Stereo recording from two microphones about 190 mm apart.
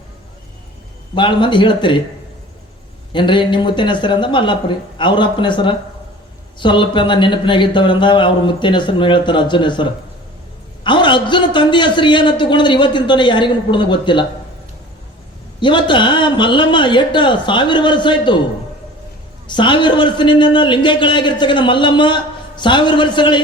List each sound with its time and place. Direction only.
1.1 s a man's voice: 25° left (ahead or behind)
3.1 s a man's voice: 25° left (ahead or behind)
15.6 s a man's voice: 25° left (ahead or behind)
19.5 s a man's voice: 25° left (ahead or behind)